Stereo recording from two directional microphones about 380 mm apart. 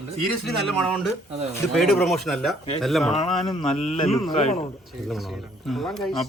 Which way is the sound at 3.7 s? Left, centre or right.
Centre.